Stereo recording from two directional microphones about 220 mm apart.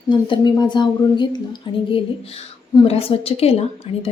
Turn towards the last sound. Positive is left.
turn(degrees=30)  # may be behind; listen again after turning